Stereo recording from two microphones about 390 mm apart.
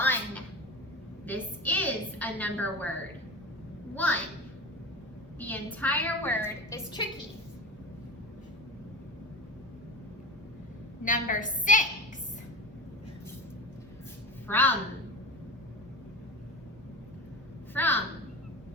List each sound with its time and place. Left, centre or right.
0.0 s a sound: centre
3.9 s a child's voice: centre
5.4 s a woman's voice: centre
11.0 s a woman's voice: centre
14.4 s a woman's voice: centre
17.7 s a woman's voice: centre